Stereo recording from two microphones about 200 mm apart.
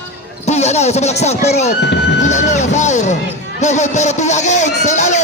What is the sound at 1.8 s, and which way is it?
Music, 60° left (ahead or behind).